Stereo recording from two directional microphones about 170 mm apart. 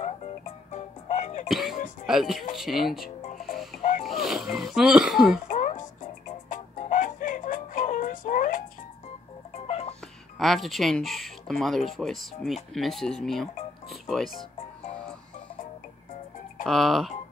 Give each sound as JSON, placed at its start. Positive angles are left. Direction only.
{"t": 0.7, "sound": "music", "side_deg": 40}
{"t": 1.5, "sound": "music", "side_deg": 0}
{"t": 2.0, "sound": "speech", "side_deg": 0}
{"t": 5.5, "sound": "music", "side_deg": 45}
{"t": 9.7, "sound": "music", "side_deg": 40}
{"t": 10.4, "sound": "speech", "side_deg": 0}
{"t": 16.6, "sound": "speech", "side_deg": 0}